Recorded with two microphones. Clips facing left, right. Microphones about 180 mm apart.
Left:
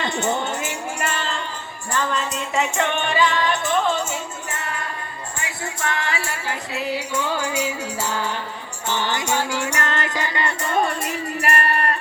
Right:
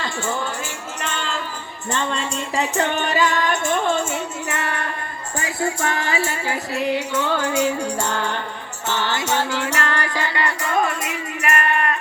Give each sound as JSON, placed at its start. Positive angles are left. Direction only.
{"t": 0.0, "sound": "music", "side_deg": 20}
{"t": 1.0, "sound": "music", "side_deg": 5}
{"t": 1.9, "sound": "music", "side_deg": -25}
{"t": 4.4, "sound": "music", "side_deg": -70}
{"t": 5.4, "sound": "music", "side_deg": -30}
{"t": 6.7, "sound": "music", "side_deg": 10}